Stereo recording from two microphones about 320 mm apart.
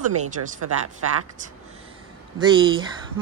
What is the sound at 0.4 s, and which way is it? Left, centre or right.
Speech, right.